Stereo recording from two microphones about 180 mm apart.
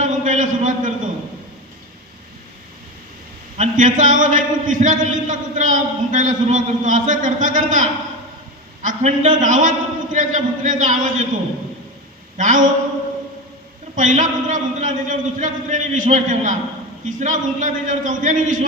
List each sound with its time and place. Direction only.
0.0 s a sound: 45° right (ahead or behind)
3.6 s a man's voice: 45° right (ahead or behind)
12.4 s a man's voice: 45° right (ahead or behind)
13.9 s a man's voice: 45° right (ahead or behind)